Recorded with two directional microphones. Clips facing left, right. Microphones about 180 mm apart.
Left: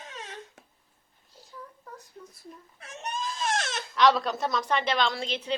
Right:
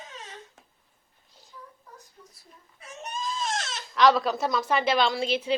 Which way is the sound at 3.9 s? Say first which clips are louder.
Right 2 dB; centre (ahead or behind).